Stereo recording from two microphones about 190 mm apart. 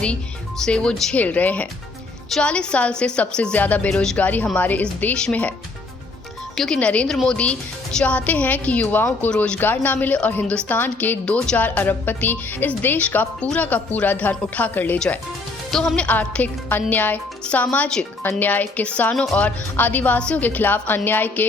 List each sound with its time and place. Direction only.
0.6 s a woman's voice: 5° left (ahead or behind)
6.6 s a woman's voice: 5° left (ahead or behind)